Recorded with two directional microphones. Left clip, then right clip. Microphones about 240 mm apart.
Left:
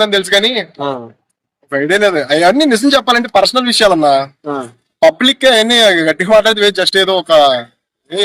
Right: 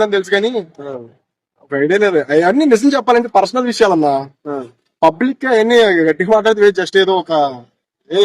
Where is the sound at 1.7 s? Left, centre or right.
Centre.